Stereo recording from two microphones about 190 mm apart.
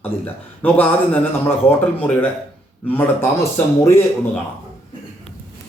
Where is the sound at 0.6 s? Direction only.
10° left (ahead or behind).